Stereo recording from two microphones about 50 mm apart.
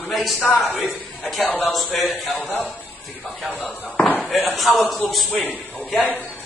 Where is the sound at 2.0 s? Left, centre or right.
Centre.